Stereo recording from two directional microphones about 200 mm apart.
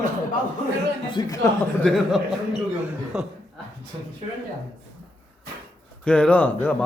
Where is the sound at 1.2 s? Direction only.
20° left (ahead or behind).